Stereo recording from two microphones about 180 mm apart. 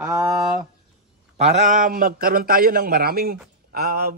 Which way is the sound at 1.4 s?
40° right (ahead or behind).